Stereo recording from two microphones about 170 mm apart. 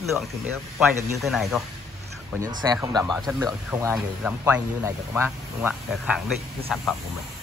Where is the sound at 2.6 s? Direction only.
25° right (ahead or behind).